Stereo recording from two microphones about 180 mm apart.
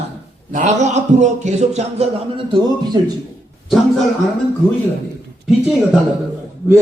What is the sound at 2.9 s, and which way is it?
Speech, 25° right (ahead or behind).